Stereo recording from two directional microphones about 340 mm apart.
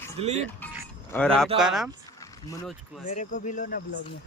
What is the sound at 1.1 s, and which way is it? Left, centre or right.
Speech, centre.